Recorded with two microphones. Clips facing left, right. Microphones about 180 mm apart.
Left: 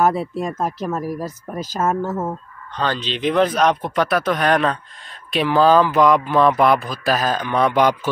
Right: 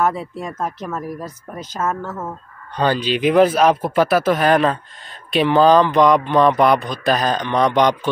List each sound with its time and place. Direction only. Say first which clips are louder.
0.6 s speech: left 2 dB; 5° left (ahead or behind)
1.2 s speech: left 4 dB; 35° left (ahead or behind)
1.7 s speech: left 2 dB; 15° left (ahead or behind)
2.0 s speech: left 5 dB; 30° left (ahead or behind)
2.8 s speech: right 4 dB; 10° right (ahead or behind); by 8.1 s 5° left (ahead or behind)